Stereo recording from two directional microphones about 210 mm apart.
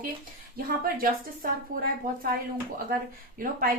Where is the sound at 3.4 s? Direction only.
45° right (ahead or behind).